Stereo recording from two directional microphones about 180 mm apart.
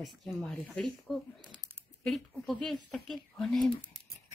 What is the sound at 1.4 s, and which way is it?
Speech, 25° right (ahead or behind).